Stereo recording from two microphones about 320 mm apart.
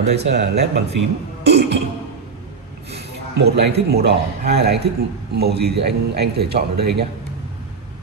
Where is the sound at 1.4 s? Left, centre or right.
Right.